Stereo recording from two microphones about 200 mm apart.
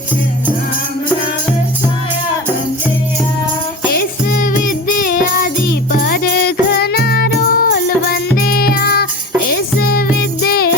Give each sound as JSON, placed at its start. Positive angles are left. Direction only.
{"t": 3.9, "sound": "music", "side_deg": 45}